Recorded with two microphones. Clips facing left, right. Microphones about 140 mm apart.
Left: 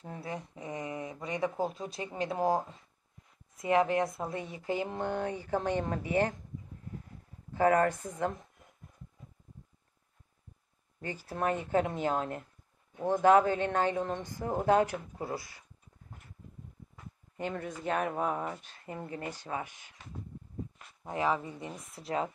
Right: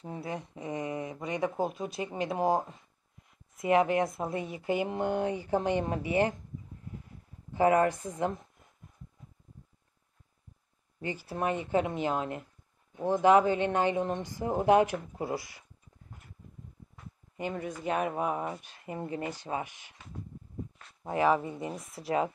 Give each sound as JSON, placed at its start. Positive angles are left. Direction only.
{"t": 0.2, "sound": "speech", "side_deg": -20}
{"t": 3.6, "sound": "speech", "side_deg": -15}
{"t": 7.5, "sound": "speech", "side_deg": -15}
{"t": 11.2, "sound": "speech", "side_deg": -5}
{"t": 17.4, "sound": "speech", "side_deg": -5}
{"t": 21.1, "sound": "speech", "side_deg": -15}